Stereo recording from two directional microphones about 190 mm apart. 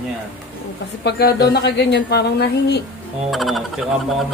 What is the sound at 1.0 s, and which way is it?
Speech, 60° left (ahead or behind).